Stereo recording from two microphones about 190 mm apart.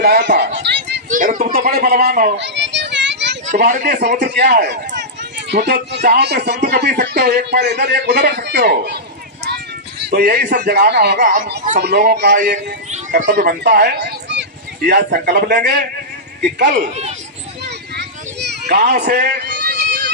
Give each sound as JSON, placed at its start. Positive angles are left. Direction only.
{"t": 0.0, "sound": "speech", "side_deg": -60}
{"t": 0.6, "sound": "a sound", "side_deg": -65}
{"t": 1.1, "sound": "a sound", "side_deg": -45}
{"t": 1.6, "sound": "speech", "side_deg": -55}
{"t": 2.4, "sound": "children playing", "side_deg": -70}
{"t": 3.7, "sound": "speech", "side_deg": -45}
{"t": 4.2, "sound": "speech", "side_deg": -60}
{"t": 10.1, "sound": "speech", "side_deg": -55}
{"t": 12.9, "sound": "speech", "side_deg": -40}
{"t": 14.8, "sound": "speech", "side_deg": -50}
{"t": 16.6, "sound": "speech", "side_deg": -45}
{"t": 17.7, "sound": "a sound", "side_deg": -60}